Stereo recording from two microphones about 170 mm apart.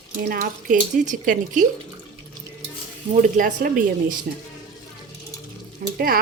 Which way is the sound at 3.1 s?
50° right (ahead or behind).